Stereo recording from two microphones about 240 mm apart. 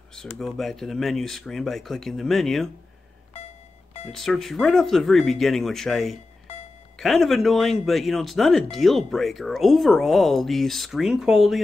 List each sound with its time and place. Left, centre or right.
0.1 s speech: centre
4.1 s speech: centre